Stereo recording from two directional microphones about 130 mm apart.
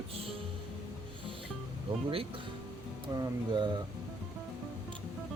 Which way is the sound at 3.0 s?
35° right (ahead or behind).